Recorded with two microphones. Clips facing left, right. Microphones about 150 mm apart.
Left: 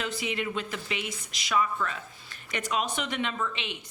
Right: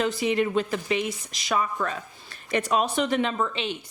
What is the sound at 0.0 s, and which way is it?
A woman's voice, 35° right (ahead or behind).